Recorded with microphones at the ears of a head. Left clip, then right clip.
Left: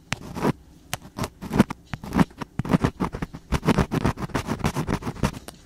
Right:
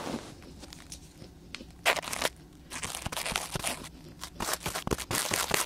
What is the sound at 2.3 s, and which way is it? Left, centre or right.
Crunch, left.